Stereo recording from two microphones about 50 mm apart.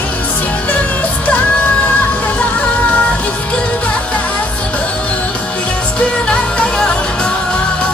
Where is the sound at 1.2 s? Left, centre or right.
Left.